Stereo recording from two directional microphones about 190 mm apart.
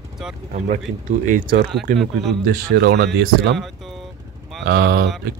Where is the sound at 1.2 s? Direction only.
45° right (ahead or behind).